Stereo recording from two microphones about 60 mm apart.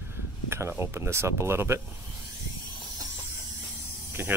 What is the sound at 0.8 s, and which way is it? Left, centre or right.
Speech, right.